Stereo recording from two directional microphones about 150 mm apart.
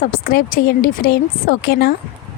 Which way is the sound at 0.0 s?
75° left (ahead or behind).